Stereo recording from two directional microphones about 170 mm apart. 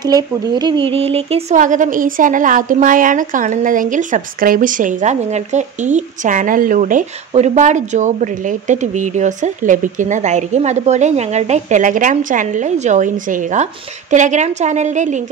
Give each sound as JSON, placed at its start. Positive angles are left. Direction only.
{"t": 0.0, "sound": "speech", "side_deg": -25}
{"t": 1.6, "sound": "a woman's voice", "side_deg": -50}